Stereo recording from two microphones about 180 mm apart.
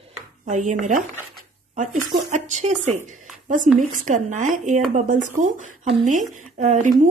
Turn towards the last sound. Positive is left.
turn(degrees=-40)  # may be behind; listen again after turning